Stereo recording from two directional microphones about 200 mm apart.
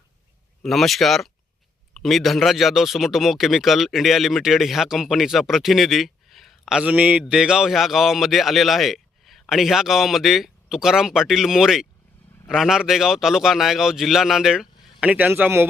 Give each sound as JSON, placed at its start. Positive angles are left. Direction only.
{"t": 0.6, "sound": "speech", "side_deg": 0}